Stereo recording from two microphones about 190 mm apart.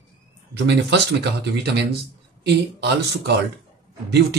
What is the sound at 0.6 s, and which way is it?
Speech, 65° right (ahead or behind).